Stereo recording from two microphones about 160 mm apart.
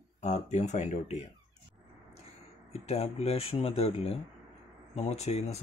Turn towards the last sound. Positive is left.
turn(degrees=40)  # may be behind; listen again after turning